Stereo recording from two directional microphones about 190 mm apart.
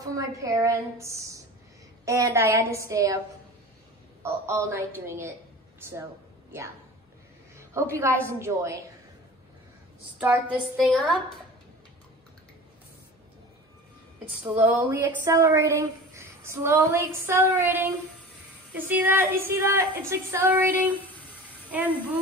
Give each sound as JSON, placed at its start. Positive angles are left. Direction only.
{"t": 0.0, "sound": "speech", "side_deg": -15}
{"t": 4.2, "sound": "speech", "side_deg": -15}
{"t": 7.9, "sound": "speech", "side_deg": -15}
{"t": 10.1, "sound": "speech", "side_deg": -5}
{"t": 14.5, "sound": "speech", "side_deg": -10}